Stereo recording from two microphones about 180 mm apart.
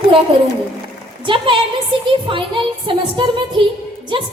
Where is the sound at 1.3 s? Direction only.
25° right (ahead or behind).